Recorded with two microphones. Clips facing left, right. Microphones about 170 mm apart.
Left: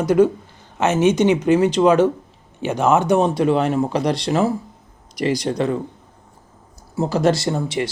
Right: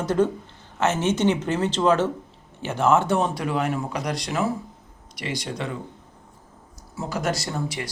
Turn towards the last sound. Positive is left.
turn(degrees=25)  # may be behind; listen again after turning